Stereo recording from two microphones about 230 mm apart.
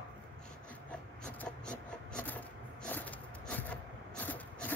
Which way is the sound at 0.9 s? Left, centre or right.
Centre.